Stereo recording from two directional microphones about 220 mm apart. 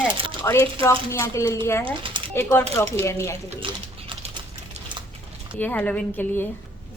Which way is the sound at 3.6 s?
25° right (ahead or behind).